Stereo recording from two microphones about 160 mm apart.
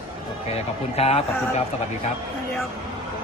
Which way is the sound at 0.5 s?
40° left (ahead or behind).